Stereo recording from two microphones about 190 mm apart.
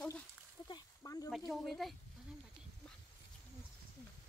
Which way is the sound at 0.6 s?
20° left (ahead or behind).